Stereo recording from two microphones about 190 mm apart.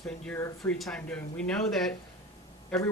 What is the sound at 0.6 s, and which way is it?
Speech, 5° left (ahead or behind).